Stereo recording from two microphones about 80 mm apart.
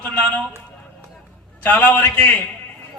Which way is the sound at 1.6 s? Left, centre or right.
Left.